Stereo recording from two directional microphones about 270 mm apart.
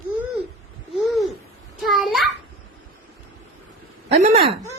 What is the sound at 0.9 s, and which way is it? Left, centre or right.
Babbling, centre.